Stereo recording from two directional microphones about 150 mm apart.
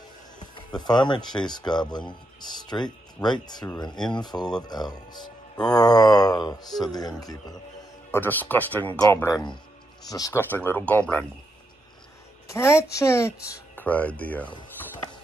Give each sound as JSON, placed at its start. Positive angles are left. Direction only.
{"t": 0.6, "sound": "speech", "side_deg": 30}
{"t": 8.1, "sound": "speech", "side_deg": 15}
{"t": 12.4, "sound": "a woman's voice", "side_deg": 20}